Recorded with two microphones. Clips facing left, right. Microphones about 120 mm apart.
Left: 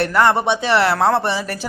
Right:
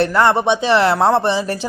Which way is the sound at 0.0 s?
25° right (ahead or behind).